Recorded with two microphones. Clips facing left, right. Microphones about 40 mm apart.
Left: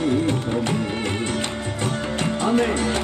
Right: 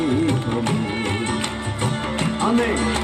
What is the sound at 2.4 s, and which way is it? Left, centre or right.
Music, right.